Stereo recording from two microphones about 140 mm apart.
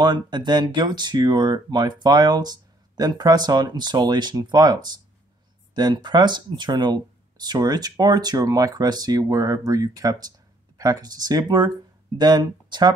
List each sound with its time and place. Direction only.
0.0 s speech: 30° right (ahead or behind)